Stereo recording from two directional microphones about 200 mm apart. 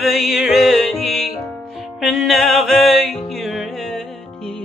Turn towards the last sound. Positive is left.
turn(degrees=0)  # may be behind; listen again after turning